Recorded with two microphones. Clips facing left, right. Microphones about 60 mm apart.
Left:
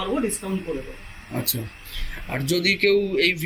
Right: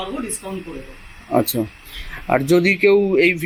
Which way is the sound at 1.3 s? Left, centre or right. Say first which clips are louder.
Right 13 dB; right.